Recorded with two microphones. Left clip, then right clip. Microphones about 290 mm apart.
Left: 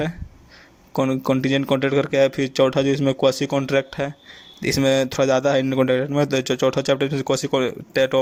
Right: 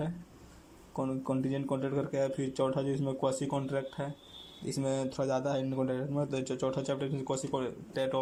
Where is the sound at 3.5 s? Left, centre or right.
Left.